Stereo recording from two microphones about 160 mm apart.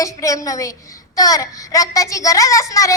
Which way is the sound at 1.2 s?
20° left (ahead or behind).